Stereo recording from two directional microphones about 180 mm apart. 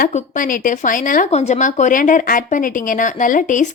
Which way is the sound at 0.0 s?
45° left (ahead or behind).